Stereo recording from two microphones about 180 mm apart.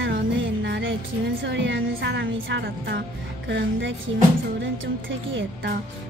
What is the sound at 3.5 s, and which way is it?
Speech, 85° right.